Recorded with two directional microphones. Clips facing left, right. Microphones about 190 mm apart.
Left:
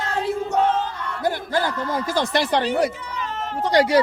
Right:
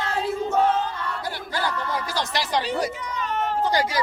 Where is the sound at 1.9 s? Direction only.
50° left (ahead or behind).